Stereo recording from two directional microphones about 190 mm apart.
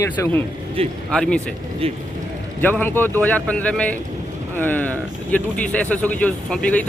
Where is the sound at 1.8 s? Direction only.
30° right (ahead or behind).